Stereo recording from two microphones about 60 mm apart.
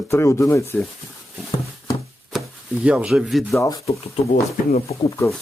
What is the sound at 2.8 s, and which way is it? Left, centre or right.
Speech, centre.